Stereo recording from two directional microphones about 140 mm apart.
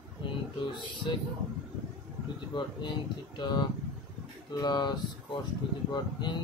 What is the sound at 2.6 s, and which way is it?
Speech, 35° left (ahead or behind).